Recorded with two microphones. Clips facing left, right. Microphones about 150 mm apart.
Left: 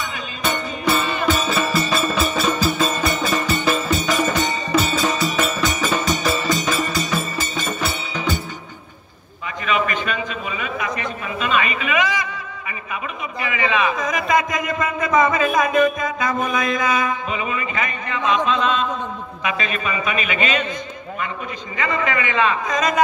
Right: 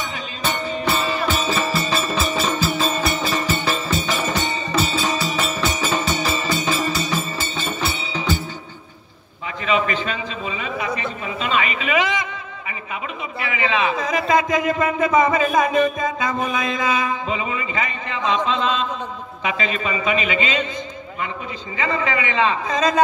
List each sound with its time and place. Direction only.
0.9 s music: 30° right (ahead or behind)
9.7 s a sound: 25° right (ahead or behind)
13.5 s a man's voice: 25° right (ahead or behind)
21.7 s a man's voice: 30° right (ahead or behind)